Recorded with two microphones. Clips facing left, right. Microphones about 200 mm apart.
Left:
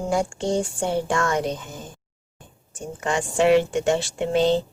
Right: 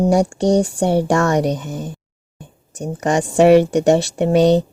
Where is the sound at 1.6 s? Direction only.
70° right (ahead or behind).